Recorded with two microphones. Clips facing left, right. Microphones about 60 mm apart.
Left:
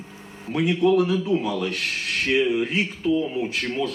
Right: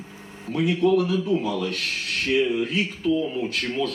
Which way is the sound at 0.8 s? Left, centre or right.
Left.